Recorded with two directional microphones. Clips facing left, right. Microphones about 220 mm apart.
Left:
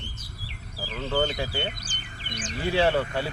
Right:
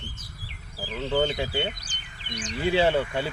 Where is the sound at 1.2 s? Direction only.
25° right (ahead or behind).